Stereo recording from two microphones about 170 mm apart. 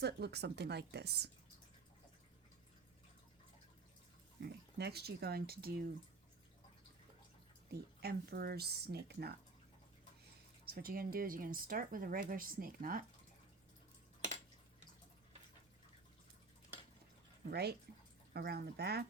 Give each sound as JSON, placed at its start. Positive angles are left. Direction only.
{"t": 0.0, "sound": "speech", "side_deg": -75}
{"t": 4.4, "sound": "speech", "side_deg": -75}
{"t": 7.7, "sound": "speech", "side_deg": -70}
{"t": 10.7, "sound": "speech", "side_deg": -60}
{"t": 17.5, "sound": "speech", "side_deg": -70}